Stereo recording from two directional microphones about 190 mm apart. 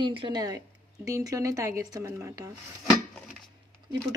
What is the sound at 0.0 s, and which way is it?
Speech, 25° right (ahead or behind).